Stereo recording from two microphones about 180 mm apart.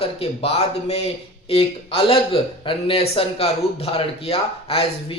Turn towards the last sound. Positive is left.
turn(degrees=30)  # may be behind; listen again after turning